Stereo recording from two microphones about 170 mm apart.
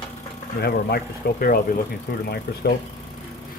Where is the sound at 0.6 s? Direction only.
65° left (ahead or behind).